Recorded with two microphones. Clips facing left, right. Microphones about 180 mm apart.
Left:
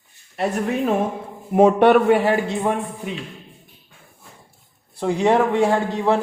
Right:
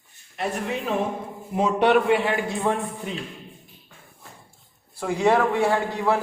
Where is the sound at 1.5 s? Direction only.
55° left (ahead or behind).